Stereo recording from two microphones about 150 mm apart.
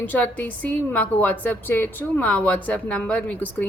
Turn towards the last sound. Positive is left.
turn(degrees=10)  # may be behind; listen again after turning